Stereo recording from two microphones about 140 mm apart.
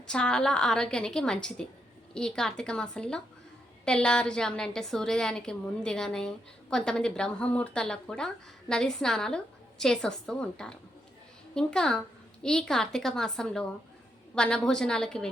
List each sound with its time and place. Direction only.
0.1 s a woman's voice: 5° left (ahead or behind)